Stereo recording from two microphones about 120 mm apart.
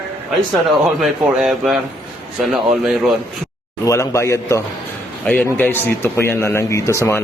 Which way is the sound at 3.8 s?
25° left (ahead or behind).